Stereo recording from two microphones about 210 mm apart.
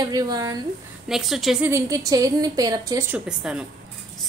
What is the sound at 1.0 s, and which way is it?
Speech, centre (ahead or behind).